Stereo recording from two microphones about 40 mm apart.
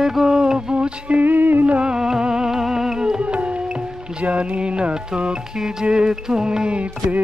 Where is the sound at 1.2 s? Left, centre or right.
Right.